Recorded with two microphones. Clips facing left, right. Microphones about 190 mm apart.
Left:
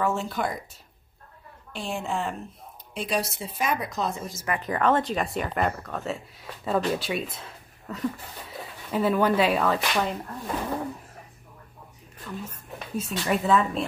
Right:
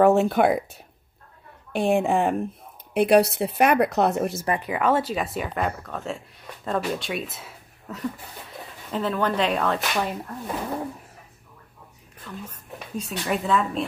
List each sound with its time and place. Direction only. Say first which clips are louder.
0.0 s speech: right 10 dB; 65° right (ahead or behind)
1.7 s speech: right 10 dB; 55° right (ahead or behind)
4.6 s speech: left 1 dB; 10° right (ahead or behind)
8.9 s speech: left 2 dB; 10° left (ahead or behind)
12.3 s speech: left 1 dB; 5° left (ahead or behind)